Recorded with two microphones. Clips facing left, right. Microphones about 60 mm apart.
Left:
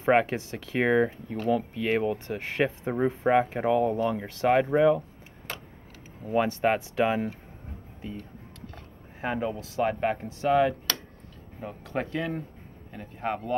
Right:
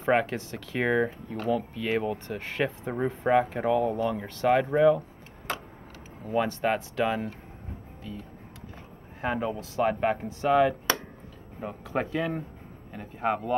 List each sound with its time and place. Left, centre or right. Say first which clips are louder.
0.1 s speech: left 2 dB; centre
6.2 s speech: left 2 dB; centre
8.0 s speech: left 2 dB; left
9.2 s speech: even; centre